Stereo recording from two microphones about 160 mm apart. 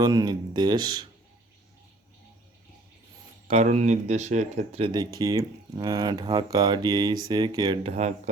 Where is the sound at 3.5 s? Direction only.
45° right (ahead or behind); by 7.8 s 25° right (ahead or behind).